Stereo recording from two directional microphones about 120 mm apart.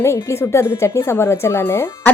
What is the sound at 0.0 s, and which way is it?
Speech, 20° left (ahead or behind).